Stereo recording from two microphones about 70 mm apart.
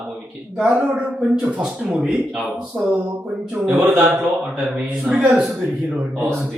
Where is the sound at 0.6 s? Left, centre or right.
Centre.